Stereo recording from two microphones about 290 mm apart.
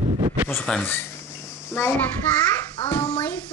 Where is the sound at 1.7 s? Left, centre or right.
Centre.